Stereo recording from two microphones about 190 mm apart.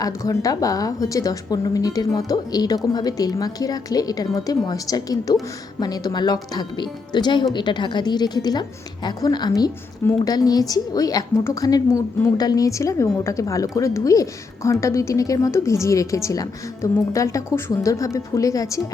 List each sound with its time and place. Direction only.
0.0 s a woman's voice: 20° left (ahead or behind)